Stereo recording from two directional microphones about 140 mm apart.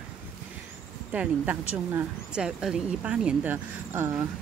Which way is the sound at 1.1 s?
10° right (ahead or behind).